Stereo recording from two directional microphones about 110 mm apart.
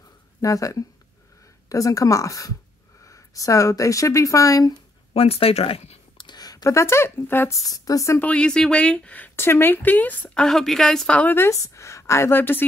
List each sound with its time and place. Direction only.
0.4 s a woman's voice: 30° left (ahead or behind)
5.1 s speech: 60° left (ahead or behind)
6.1 s speech: 40° left (ahead or behind)
8.2 s speech: 10° left (ahead or behind)